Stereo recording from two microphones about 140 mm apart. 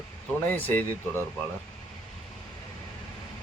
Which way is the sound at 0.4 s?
15° left (ahead or behind).